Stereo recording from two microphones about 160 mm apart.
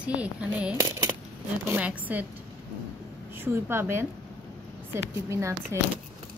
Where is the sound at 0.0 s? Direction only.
10° right (ahead or behind).